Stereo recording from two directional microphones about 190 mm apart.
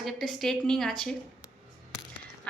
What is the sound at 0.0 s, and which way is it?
A woman's voice, centre (ahead or behind).